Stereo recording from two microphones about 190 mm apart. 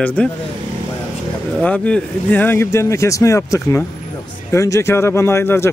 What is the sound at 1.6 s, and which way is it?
Speech, 5° left (ahead or behind).